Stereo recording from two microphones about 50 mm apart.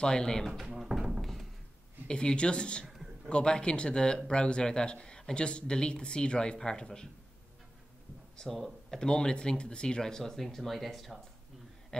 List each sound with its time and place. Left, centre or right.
0.0 s speech: centre
0.7 s a sound: centre
2.0 s speech: centre
8.4 s speech: centre
9.0 s speech: centre
11.9 s a sound: centre